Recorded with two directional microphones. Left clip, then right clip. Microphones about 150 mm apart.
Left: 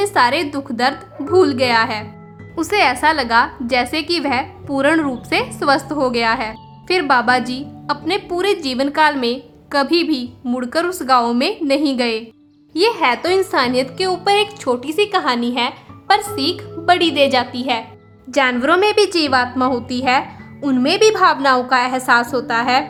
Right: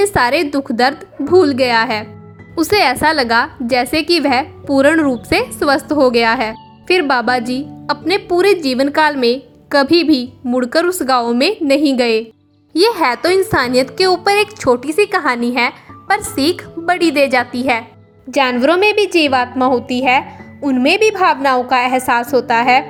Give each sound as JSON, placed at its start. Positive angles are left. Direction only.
{"t": 0.0, "sound": "a woman's voice", "side_deg": -35}
{"t": 18.4, "sound": "speech", "side_deg": 0}
{"t": 18.9, "sound": "a woman's voice", "side_deg": -20}
{"t": 19.5, "sound": "speech", "side_deg": 0}
{"t": 20.8, "sound": "a woman's voice", "side_deg": -25}
{"t": 21.8, "sound": "speech", "side_deg": 0}